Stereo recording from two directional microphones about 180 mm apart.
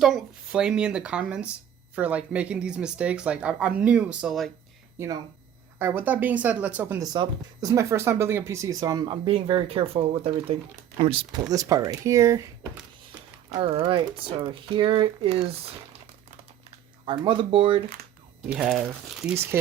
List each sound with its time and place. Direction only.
0.0 s speech: centre (ahead or behind)
4.9 s speech: 20° right (ahead or behind)
7.0 s speech: 20° right (ahead or behind)
11.5 s speech: 20° right (ahead or behind)
13.6 s speech: 30° right (ahead or behind)
17.1 s speech: 30° right (ahead or behind)
18.5 s speech: centre (ahead or behind)